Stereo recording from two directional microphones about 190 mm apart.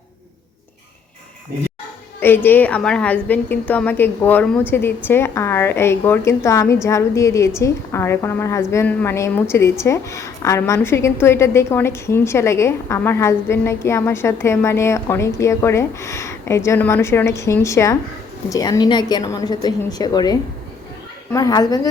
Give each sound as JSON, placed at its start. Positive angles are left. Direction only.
{"t": 2.2, "sound": "a woman's voice", "side_deg": 10}
{"t": 21.3, "sound": "a woman's voice", "side_deg": 20}